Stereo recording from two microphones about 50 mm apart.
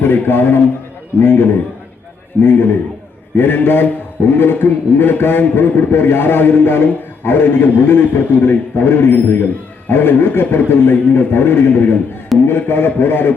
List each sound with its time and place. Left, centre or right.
0.0 s a man's voice: left